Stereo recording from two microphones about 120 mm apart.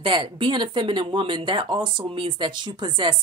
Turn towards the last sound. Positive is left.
turn(degrees=-40)  # may be behind; listen again after turning